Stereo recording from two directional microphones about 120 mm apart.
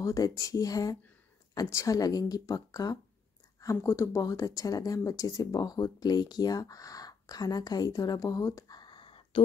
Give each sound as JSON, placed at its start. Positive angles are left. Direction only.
{"t": 0.0, "sound": "speech", "side_deg": 30}